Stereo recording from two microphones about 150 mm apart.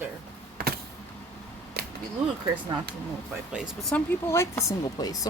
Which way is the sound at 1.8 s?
90° right.